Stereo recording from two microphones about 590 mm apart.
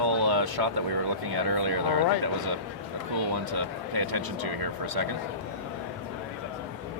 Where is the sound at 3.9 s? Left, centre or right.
Right.